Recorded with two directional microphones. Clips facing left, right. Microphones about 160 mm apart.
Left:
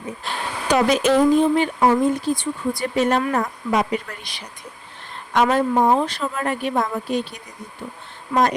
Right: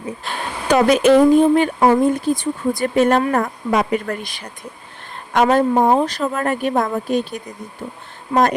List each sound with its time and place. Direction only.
0.2 s speech: centre (ahead or behind)
0.7 s speech: 55° right (ahead or behind)
8.3 s a woman's voice: 25° right (ahead or behind)